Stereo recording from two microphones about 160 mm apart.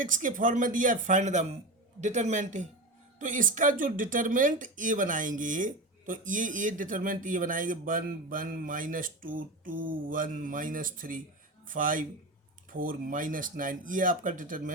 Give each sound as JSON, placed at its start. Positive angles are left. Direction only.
{"t": 0.0, "sound": "a man's voice", "side_deg": -55}